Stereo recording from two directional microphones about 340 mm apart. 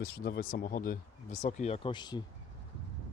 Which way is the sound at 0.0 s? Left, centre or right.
Left.